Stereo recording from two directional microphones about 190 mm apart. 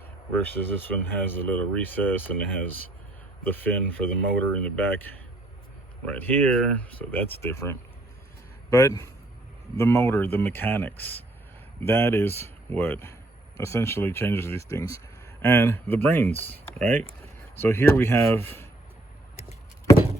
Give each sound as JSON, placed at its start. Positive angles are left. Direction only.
{"t": 0.4, "sound": "speech", "side_deg": 10}